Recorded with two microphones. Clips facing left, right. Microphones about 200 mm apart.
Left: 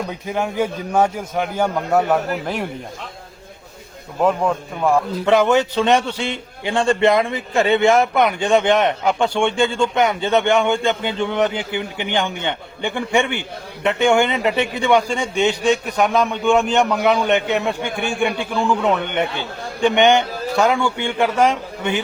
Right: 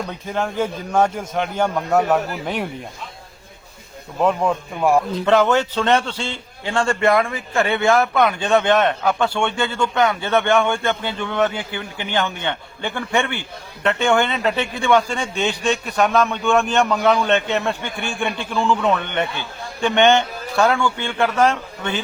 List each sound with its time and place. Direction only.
0.1 s a man's voice: 10° left (ahead or behind)
4.2 s speech: centre (ahead or behind)
5.1 s a man's voice: 15° left (ahead or behind)